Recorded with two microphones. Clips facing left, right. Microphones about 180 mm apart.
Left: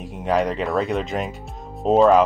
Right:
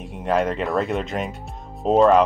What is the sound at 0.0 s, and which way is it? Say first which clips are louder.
Speech: even; centre (ahead or behind).